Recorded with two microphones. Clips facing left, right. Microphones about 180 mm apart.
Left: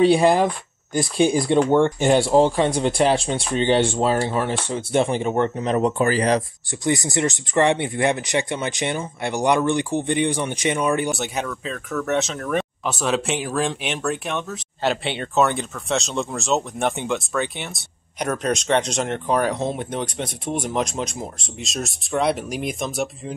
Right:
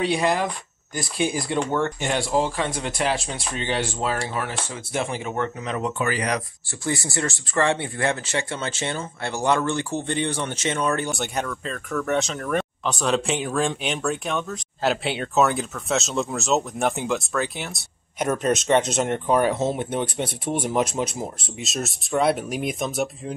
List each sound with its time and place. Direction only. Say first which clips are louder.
0.0 s speech: left 7 dB; 30° left (ahead or behind)
6.8 s speech: left 5 dB; 20° left (ahead or behind)
11.1 s speech: left 2 dB; centre (ahead or behind)